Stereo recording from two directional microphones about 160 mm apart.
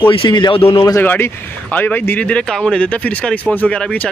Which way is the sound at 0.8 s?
20° left (ahead or behind).